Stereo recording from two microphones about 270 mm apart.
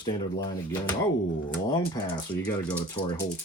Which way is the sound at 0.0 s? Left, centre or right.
Centre.